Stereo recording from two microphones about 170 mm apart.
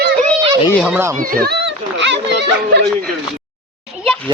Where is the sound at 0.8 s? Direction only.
10° right (ahead or behind).